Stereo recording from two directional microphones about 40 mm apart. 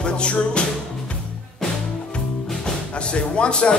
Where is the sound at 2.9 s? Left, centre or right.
Left.